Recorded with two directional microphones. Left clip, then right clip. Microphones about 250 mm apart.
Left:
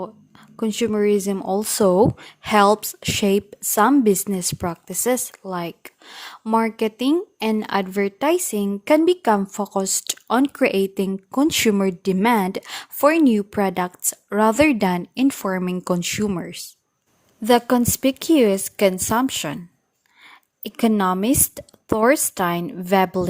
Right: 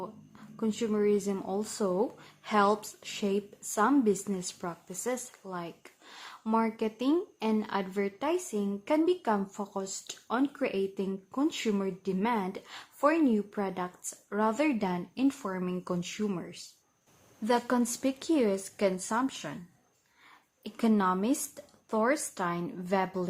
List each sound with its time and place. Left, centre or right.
0.0 s a woman's voice: left